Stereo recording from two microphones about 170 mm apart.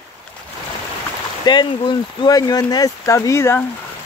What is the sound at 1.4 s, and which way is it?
Speech, 25° left (ahead or behind).